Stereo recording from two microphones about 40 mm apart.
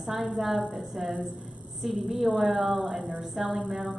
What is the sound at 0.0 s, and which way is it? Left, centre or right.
A woman's voice, centre.